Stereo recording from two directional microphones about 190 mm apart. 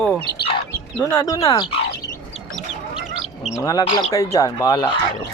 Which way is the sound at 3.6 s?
20° left (ahead or behind).